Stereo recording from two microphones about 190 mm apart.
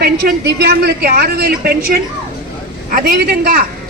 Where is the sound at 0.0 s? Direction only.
55° right (ahead or behind).